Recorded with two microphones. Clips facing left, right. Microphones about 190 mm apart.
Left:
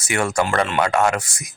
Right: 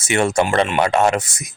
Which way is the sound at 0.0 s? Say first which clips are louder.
Right 4 dB; 25° right (ahead or behind).